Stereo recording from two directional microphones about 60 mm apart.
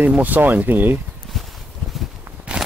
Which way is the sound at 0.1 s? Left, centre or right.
Right.